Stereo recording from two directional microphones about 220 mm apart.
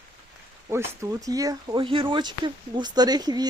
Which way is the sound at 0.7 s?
15° right (ahead or behind).